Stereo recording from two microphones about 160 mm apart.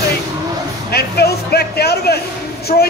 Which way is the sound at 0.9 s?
85° left.